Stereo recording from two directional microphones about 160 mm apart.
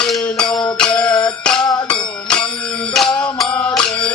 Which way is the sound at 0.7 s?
5° left (ahead or behind).